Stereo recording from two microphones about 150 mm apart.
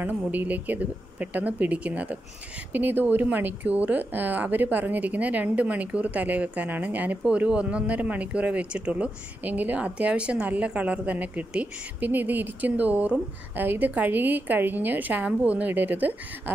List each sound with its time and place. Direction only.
0.0 s speech: 10° right (ahead or behind)